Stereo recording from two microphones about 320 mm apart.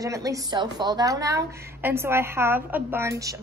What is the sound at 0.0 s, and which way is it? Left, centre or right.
A woman's voice, centre.